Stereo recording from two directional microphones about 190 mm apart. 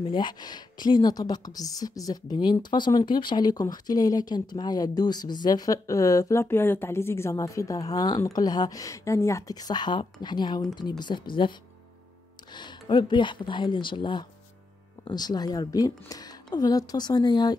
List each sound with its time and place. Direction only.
0.1 s a woman's voice: 25° left (ahead or behind)
12.5 s a woman's voice: 25° left (ahead or behind)